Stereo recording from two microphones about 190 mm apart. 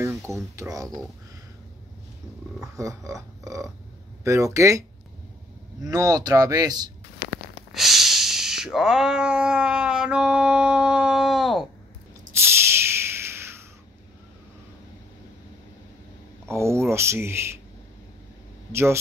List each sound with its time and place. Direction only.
0.0 s speech: 15° right (ahead or behind)
2.6 s speech: 15° right (ahead or behind)
5.9 s speech: 20° right (ahead or behind)
7.2 s a sound: 50° left (ahead or behind)
7.7 s cat: centre (ahead or behind)
12.4 s a sound: 15° right (ahead or behind)
16.4 s speech: 15° right (ahead or behind)
18.7 s speech: 15° right (ahead or behind)